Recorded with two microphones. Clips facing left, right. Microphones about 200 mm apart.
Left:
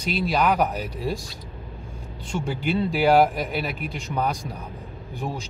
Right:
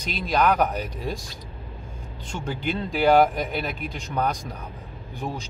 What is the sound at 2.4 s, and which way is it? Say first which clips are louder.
Speech: left 4 dB; 10° left (ahead or behind).